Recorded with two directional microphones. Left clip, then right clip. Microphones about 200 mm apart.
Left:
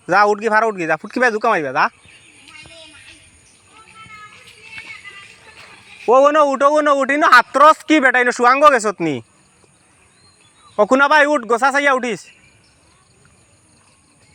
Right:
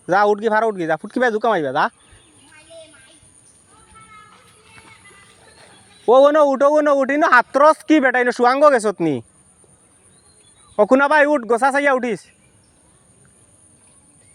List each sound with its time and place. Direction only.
0.0 s speech: 15° right (ahead or behind)
6.3 s speech: 20° right (ahead or behind)
10.8 s speech: 20° right (ahead or behind)